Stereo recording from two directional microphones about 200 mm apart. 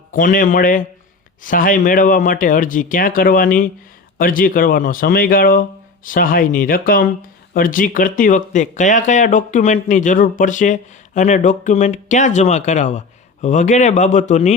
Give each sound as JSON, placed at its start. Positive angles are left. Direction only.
{"t": 0.1, "sound": "speech", "side_deg": 40}